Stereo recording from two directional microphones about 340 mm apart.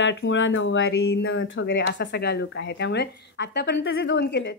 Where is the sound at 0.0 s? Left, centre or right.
Left.